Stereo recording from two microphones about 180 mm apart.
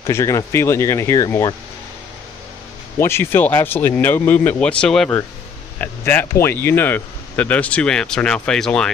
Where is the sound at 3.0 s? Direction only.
15° left (ahead or behind).